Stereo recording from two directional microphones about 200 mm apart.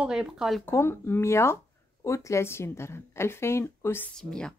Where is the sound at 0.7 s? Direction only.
10° left (ahead or behind).